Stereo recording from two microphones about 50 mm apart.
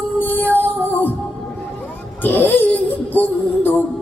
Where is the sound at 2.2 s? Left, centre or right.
Left.